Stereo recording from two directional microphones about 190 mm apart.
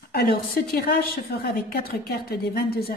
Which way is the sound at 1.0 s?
55° left (ahead or behind).